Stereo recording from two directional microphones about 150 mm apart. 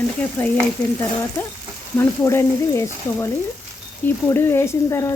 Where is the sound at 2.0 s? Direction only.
20° left (ahead or behind).